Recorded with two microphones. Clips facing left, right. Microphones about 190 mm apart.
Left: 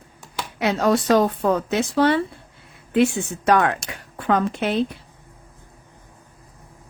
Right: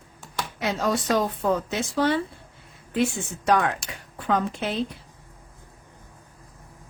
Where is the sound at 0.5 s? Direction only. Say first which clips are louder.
Left 6 dB; 65° left (ahead or behind).